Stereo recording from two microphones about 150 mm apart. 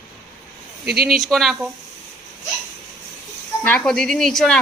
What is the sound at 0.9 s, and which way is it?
Speech, 90° right.